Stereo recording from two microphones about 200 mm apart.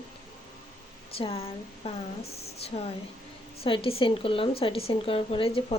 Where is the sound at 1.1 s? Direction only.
30° left (ahead or behind).